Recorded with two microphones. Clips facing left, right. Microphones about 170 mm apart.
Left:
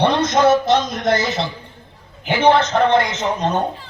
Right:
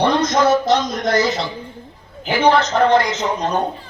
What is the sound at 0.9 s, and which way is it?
A man's voice, 25° left (ahead or behind).